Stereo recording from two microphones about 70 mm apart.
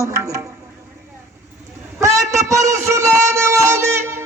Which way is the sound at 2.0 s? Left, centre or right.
Right.